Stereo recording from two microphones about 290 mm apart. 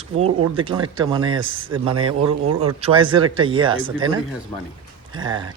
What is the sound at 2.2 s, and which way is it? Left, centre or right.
Speech, right.